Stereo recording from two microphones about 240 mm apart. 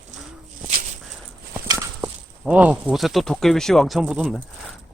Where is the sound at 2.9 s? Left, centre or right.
Centre.